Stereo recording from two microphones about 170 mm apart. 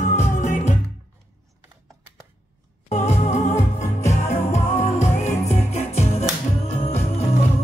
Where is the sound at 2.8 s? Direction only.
40° left (ahead or behind).